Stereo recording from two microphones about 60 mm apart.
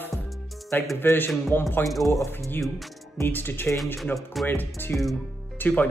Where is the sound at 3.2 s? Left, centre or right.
Left.